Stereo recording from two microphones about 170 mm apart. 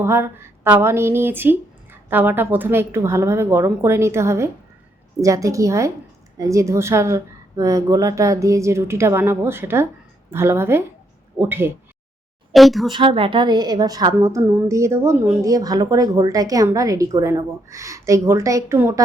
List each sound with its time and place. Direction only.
0.0 s a woman's voice: 15° right (ahead or behind)
12.5 s speech: centre (ahead or behind)
12.9 s a woman's voice: 30° right (ahead or behind)